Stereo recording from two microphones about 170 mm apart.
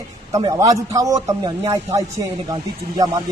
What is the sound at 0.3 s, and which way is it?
A man's voice, 20° right (ahead or behind).